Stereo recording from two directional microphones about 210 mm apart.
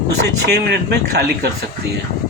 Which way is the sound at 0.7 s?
50° right (ahead or behind).